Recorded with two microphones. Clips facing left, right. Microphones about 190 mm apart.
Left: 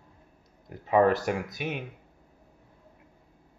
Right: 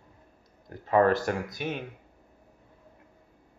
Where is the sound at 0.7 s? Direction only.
5° left (ahead or behind).